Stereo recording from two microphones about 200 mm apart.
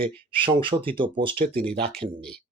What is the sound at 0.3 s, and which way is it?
Speech, 25° right (ahead or behind).